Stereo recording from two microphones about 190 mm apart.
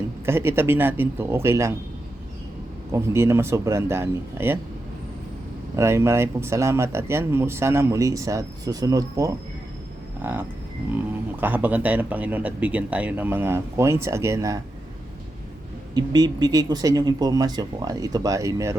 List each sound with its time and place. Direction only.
0.3 s speech: 10° right (ahead or behind)
2.9 s speech: 15° right (ahead or behind)
5.7 s speech: 15° right (ahead or behind)
16.0 s speech: 20° right (ahead or behind)